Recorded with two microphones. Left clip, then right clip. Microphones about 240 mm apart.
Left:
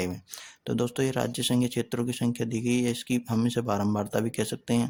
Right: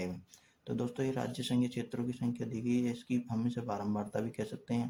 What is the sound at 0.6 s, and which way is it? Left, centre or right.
Speech, left.